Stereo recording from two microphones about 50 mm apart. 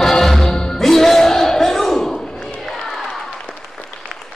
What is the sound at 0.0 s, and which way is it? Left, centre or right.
Music, centre.